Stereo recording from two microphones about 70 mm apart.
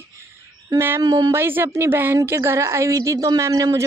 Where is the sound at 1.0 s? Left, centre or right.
Right.